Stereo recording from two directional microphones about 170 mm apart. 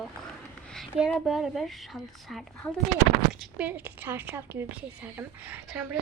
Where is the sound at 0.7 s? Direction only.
Centre (ahead or behind).